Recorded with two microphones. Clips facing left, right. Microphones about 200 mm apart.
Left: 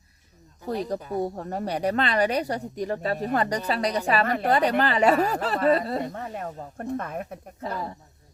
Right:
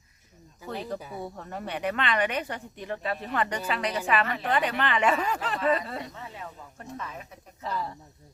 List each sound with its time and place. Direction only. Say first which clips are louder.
0.7 s speech: left 6 dB; 40° left (ahead or behind)
0.9 s speech: left 8 dB; 5° right (ahead or behind)
1.2 s speech: left 8 dB; 40° left (ahead or behind)